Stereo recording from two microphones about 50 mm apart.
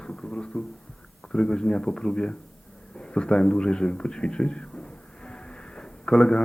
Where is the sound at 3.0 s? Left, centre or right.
Centre.